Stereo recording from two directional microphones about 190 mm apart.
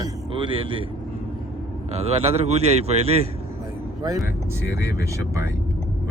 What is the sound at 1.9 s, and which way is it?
Speech, 35° right (ahead or behind).